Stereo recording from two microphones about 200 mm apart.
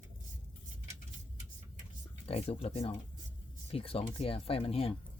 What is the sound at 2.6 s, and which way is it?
Speech, 30° left (ahead or behind).